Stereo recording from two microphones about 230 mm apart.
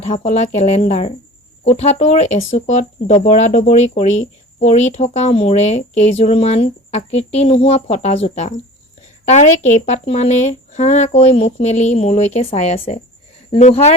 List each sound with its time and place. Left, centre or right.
0.0 s speech: left